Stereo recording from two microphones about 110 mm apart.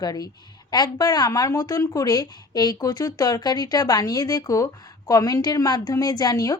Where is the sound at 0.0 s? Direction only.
35° left (ahead or behind).